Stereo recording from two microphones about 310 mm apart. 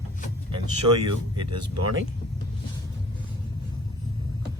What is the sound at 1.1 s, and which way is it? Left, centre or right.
Speech, right.